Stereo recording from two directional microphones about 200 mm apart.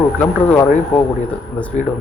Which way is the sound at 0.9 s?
5° left (ahead or behind).